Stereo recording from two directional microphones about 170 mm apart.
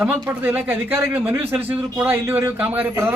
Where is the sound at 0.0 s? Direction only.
10° right (ahead or behind).